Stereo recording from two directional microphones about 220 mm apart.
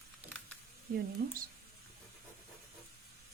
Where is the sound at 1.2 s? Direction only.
45° right (ahead or behind).